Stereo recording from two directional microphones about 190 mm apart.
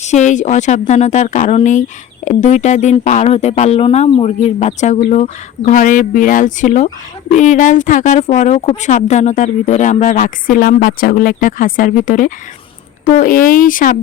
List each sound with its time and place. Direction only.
0.0 s a woman's voice: 40° left (ahead or behind)